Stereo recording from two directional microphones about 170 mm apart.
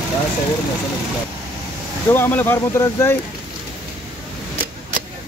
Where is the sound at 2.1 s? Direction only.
10° left (ahead or behind).